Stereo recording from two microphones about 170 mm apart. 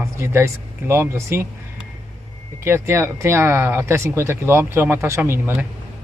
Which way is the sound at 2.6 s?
15° right (ahead or behind).